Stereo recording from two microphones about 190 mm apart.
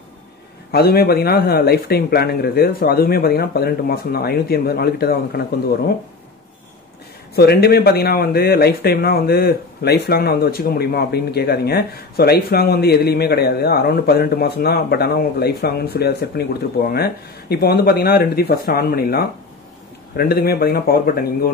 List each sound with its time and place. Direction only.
0.7 s speech: 55° left (ahead or behind)
7.3 s speech: 55° left (ahead or behind)